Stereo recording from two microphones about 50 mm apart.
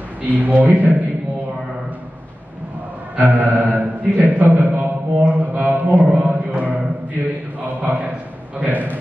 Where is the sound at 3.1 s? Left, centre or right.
Right.